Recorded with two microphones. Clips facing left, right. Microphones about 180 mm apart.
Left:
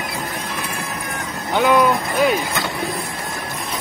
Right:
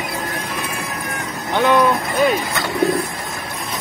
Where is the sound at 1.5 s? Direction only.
Centre (ahead or behind).